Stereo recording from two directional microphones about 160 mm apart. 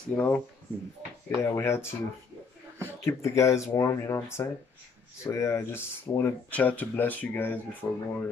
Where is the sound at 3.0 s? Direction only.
20° left (ahead or behind).